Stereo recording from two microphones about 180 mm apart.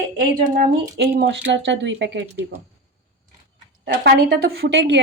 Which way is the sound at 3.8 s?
60° right (ahead or behind).